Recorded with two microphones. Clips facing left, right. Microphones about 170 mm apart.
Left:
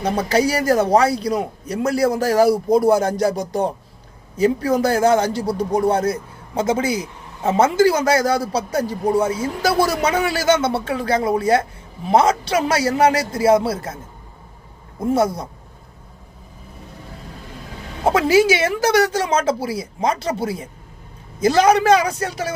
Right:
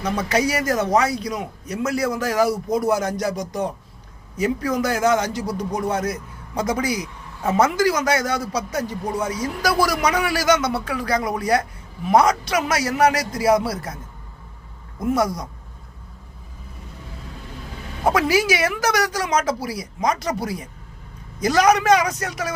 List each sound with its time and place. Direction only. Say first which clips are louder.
0.0 s a man's voice: left 3 dB; 30° left (ahead or behind)
18.0 s a man's voice: left 4 dB; 25° left (ahead or behind)